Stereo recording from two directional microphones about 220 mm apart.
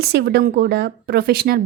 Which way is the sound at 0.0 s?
45° right (ahead or behind).